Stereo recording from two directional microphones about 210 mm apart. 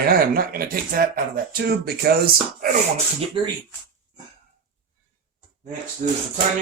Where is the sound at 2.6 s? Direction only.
30° right (ahead or behind).